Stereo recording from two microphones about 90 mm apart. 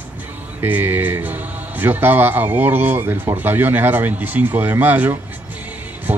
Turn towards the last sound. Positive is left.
turn(degrees=-20)  # may be behind; listen again after turning